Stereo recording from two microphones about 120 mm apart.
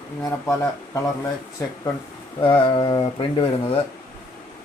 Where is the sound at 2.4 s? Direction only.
45° left (ahead or behind).